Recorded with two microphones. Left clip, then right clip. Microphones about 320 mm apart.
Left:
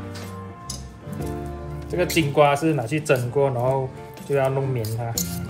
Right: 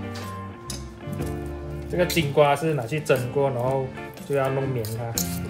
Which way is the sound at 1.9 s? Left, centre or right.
Centre.